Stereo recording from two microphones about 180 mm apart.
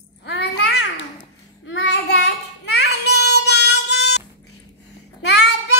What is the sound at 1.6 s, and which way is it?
Child singing, 75° left (ahead or behind).